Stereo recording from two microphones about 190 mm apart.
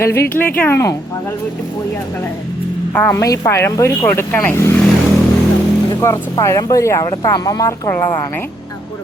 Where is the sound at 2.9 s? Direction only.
10° left (ahead or behind).